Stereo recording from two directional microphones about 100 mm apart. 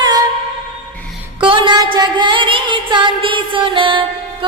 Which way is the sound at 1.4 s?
60° right (ahead or behind).